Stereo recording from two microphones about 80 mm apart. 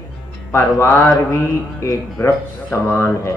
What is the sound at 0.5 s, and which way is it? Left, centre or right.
Speech, left.